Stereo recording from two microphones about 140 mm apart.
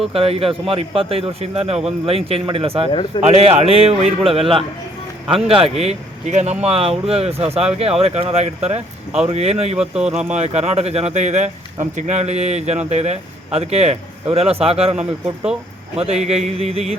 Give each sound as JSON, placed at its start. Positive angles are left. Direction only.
{"t": 0.1, "sound": "speech", "side_deg": -45}
{"t": 9.9, "sound": "speech", "side_deg": -5}
{"t": 10.3, "sound": "speech", "side_deg": -50}